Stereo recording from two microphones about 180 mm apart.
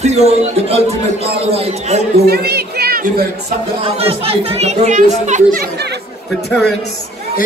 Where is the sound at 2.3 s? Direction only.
65° right (ahead or behind).